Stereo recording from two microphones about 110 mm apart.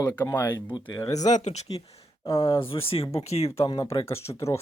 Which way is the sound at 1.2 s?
90° left.